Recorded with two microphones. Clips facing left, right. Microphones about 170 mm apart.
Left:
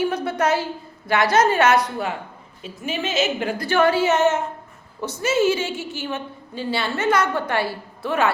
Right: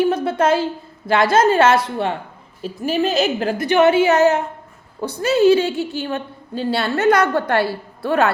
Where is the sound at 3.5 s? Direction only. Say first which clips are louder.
Right 5 dB; 20° right (ahead or behind).